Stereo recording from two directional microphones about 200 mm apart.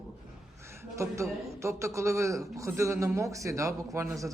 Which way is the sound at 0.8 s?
15° right (ahead or behind).